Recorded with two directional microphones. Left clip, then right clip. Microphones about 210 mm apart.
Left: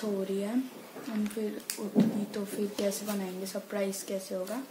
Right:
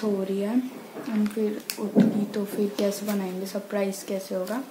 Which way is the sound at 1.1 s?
5° left (ahead or behind).